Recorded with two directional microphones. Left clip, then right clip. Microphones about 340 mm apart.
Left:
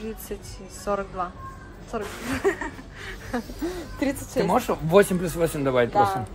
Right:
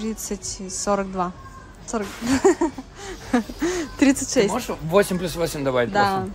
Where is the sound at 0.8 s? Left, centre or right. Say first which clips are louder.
Right 4 dB; left.